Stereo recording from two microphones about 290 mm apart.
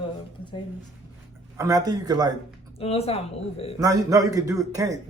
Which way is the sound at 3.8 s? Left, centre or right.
Centre.